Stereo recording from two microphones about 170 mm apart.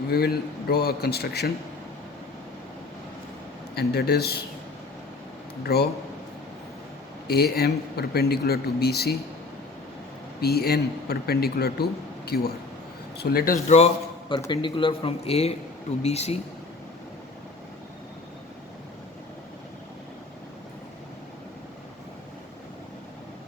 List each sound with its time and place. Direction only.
0.1 s a man's voice: 65° left (ahead or behind)
3.8 s a man's voice: 70° left (ahead or behind)
5.6 s a man's voice: 70° left (ahead or behind)
7.3 s a man's voice: 65° left (ahead or behind)
10.4 s a man's voice: 65° left (ahead or behind)
13.7 s a man's voice: 40° left (ahead or behind)
14.3 s speech: 25° left (ahead or behind)